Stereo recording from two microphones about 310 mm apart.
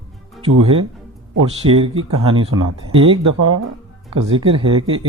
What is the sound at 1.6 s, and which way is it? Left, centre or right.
Speech, centre.